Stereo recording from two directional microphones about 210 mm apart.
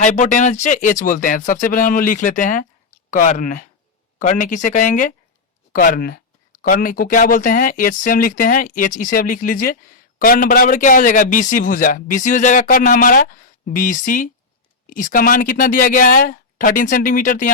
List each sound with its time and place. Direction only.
0.0 s a man's voice: 35° left (ahead or behind)